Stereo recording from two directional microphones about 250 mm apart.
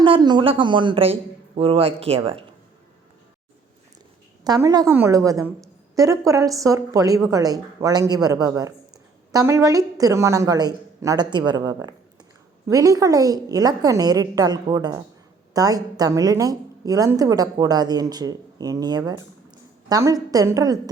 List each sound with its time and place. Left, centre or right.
0.0 s a man's voice: centre
4.4 s a woman's voice: centre